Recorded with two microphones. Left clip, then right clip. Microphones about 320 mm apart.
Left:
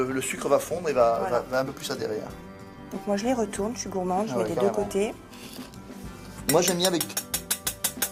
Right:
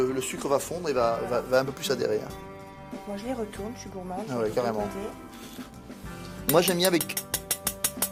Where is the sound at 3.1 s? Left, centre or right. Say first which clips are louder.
Left 6 dB; centre.